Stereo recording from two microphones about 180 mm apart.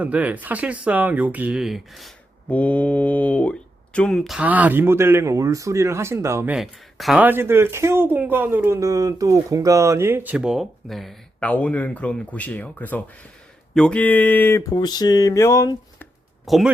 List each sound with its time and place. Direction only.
0.0 s speech: 10° right (ahead or behind); by 16.0 s 15° left (ahead or behind)
16.5 s speech: centre (ahead or behind)